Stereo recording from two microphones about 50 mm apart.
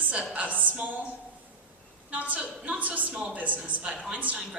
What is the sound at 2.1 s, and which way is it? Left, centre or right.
A woman's voice, right.